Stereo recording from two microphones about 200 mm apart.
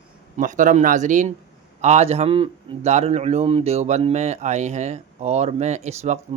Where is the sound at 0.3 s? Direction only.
40° right (ahead or behind).